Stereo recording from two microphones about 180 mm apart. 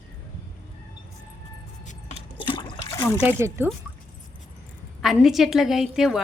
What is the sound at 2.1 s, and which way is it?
Toilet flush, 30° left (ahead or behind).